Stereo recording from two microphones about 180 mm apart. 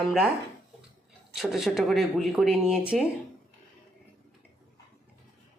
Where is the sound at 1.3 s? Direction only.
Centre (ahead or behind).